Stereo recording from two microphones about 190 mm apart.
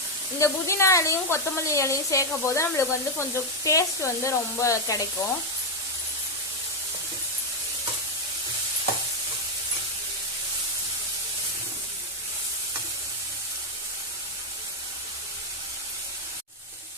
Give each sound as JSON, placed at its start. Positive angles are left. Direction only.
{"t": 0.3, "sound": "speech", "side_deg": 15}